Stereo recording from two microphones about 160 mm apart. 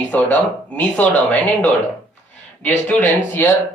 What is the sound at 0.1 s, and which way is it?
Speech, 10° left (ahead or behind).